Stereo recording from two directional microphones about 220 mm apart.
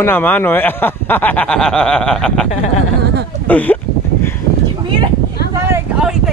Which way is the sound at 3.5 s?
5° left (ahead or behind).